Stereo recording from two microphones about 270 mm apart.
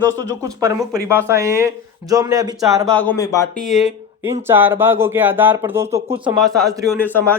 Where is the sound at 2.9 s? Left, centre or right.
Centre.